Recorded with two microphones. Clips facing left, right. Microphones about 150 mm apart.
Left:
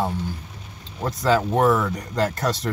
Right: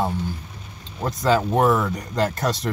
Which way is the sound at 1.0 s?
20° right (ahead or behind).